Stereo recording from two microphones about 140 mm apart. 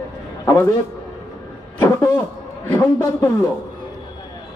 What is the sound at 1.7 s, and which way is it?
A man's voice, 25° left (ahead or behind).